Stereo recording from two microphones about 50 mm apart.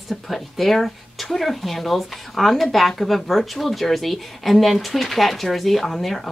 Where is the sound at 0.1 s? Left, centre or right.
Centre.